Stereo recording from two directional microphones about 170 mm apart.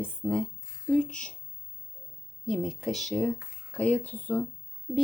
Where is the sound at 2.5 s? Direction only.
Centre (ahead or behind).